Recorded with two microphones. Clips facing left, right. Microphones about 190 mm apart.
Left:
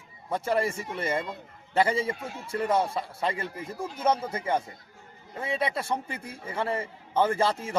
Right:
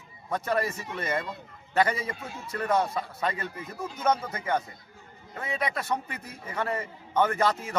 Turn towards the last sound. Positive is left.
turn(degrees=30)  # may be behind; listen again after turning